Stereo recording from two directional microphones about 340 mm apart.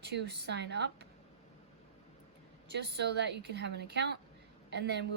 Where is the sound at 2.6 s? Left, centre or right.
Right.